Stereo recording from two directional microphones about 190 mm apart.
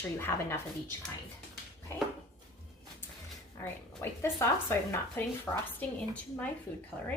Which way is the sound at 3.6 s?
15° left (ahead or behind).